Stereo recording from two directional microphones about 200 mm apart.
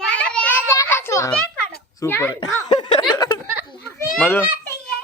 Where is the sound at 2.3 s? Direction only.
25° left (ahead or behind).